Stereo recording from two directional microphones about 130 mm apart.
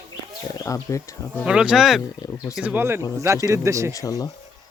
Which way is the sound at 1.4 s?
5° right (ahead or behind).